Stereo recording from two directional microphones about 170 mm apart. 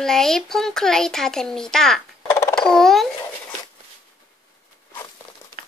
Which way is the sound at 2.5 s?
5° left (ahead or behind).